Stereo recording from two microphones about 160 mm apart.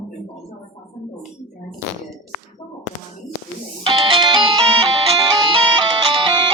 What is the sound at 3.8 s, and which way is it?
Music, 35° right (ahead or behind).